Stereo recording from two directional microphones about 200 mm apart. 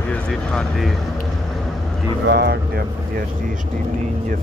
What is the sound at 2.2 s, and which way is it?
Speech, 55° right (ahead or behind).